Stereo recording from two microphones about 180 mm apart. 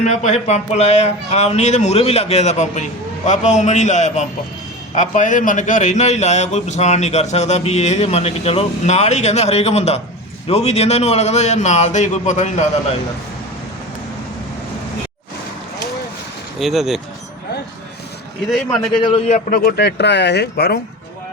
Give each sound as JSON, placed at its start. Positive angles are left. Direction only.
{"t": 0.0, "sound": "a man's voice", "side_deg": 40}
{"t": 16.6, "sound": "speech", "side_deg": 0}
{"t": 18.4, "sound": "speech", "side_deg": 0}
{"t": 19.0, "sound": "a man's voice", "side_deg": 30}
{"t": 19.5, "sound": "speech", "side_deg": 55}